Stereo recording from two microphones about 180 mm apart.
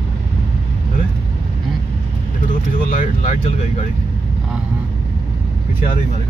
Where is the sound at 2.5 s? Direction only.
45° left (ahead or behind).